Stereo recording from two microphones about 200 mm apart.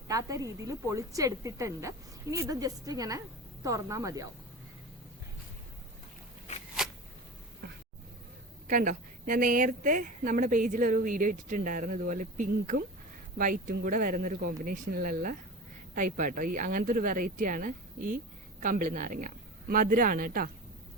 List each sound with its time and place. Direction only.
0.1 s a woman's voice: 15° right (ahead or behind)
7.6 s a sound: 55° right (ahead or behind)
8.6 s speech: 40° right (ahead or behind)